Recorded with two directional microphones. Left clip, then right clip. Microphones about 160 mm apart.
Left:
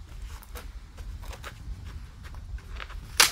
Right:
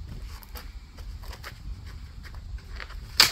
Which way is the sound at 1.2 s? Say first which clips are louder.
Even; 20° left (ahead or behind).